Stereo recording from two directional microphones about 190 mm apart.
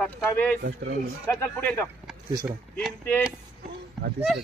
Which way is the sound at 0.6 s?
60° right (ahead or behind).